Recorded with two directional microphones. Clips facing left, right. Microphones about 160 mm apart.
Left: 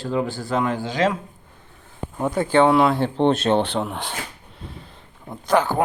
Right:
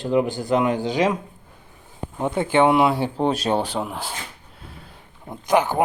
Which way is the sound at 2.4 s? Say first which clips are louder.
Left 1 dB; 20° right (ahead or behind).